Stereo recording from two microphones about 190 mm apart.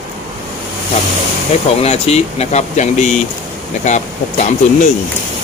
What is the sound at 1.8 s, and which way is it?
Speech, 35° left (ahead or behind).